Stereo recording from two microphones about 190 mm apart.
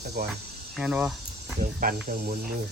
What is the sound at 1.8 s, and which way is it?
Speech, 45° right (ahead or behind).